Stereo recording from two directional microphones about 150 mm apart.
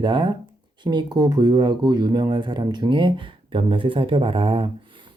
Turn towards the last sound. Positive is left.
turn(degrees=-35)  # may be behind; listen again after turning